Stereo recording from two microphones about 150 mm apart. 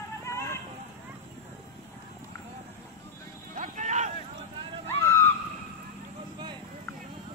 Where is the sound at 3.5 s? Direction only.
55° right (ahead or behind).